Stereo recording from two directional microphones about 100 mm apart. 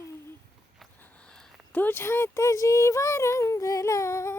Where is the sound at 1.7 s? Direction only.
20° left (ahead or behind).